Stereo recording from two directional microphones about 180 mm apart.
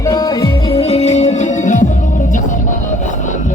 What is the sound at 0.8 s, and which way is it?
Music, 35° left (ahead or behind).